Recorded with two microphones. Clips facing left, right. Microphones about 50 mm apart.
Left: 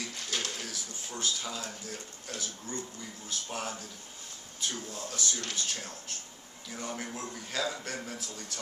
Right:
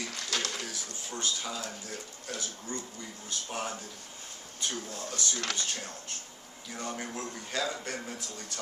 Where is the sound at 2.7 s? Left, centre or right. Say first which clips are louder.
Even; centre.